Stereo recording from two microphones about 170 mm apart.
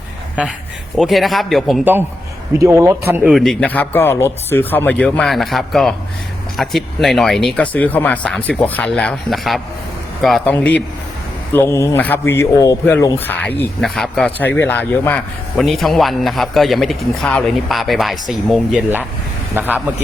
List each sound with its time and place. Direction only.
0.9 s speech: centre (ahead or behind)
1.8 s speech: 10° right (ahead or behind)
3.3 s speech: 5° left (ahead or behind)